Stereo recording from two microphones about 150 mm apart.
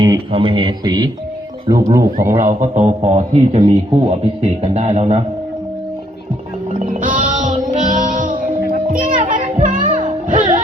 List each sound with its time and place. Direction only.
0.0 s speech: 35° right (ahead or behind)
2.4 s a man's voice: 55° right (ahead or behind)
6.7 s music: 65° right (ahead or behind)
8.9 s children playing: 60° right (ahead or behind)
10.0 s music: 60° right (ahead or behind)